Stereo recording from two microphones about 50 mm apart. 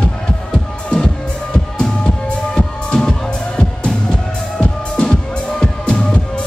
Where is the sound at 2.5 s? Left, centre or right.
Centre.